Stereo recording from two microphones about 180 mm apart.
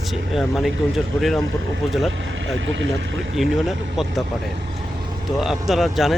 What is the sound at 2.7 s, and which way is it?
Speech, 90° right.